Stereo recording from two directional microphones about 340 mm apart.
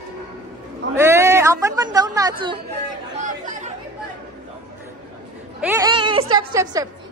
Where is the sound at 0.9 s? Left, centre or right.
Centre.